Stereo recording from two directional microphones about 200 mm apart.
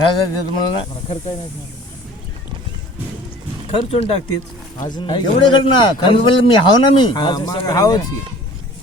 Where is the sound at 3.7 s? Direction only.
30° left (ahead or behind).